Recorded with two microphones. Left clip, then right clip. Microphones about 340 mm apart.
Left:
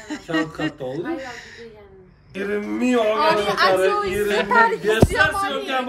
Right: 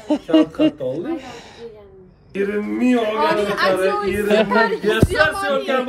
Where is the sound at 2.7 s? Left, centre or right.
Centre.